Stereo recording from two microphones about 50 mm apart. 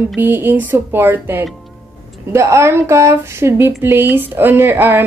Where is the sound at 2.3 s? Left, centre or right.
Right.